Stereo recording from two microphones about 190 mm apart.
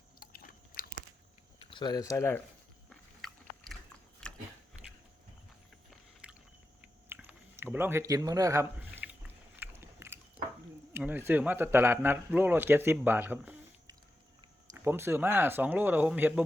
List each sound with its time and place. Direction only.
0.2 s biting: 50° left (ahead or behind)
1.5 s speech: 25° left (ahead or behind)
2.9 s biting: centre (ahead or behind)
6.2 s biting: 5° right (ahead or behind)
7.1 s chewing: 10° right (ahead or behind)
10.9 s speech: 10° right (ahead or behind)